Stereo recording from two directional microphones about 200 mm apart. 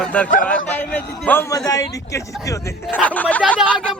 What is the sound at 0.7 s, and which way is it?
A man's voice, 10° left (ahead or behind).